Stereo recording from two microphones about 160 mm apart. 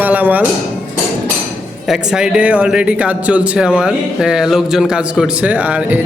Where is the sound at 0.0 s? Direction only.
10° right (ahead or behind).